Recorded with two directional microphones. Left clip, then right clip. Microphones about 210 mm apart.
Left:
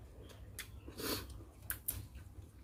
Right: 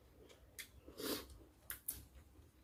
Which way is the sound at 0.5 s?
10° left (ahead or behind).